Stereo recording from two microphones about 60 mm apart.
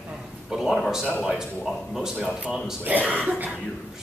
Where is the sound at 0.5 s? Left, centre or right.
Centre.